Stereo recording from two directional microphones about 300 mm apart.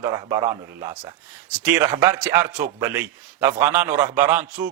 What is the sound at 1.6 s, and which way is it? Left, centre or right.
A man's voice, centre.